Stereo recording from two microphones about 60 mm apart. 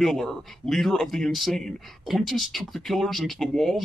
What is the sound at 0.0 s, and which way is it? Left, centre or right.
Speech, centre.